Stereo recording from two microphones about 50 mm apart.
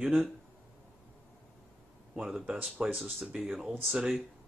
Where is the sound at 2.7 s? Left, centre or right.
Right.